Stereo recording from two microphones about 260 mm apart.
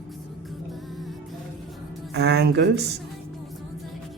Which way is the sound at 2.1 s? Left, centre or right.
Right.